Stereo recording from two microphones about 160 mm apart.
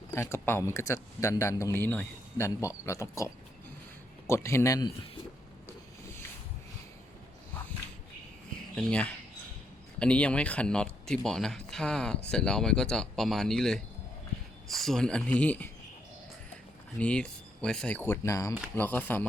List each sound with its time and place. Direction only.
0.1 s speech: 15° left (ahead or behind)
8.7 s speech: 5° left (ahead or behind)
17.0 s speech: 5° left (ahead or behind)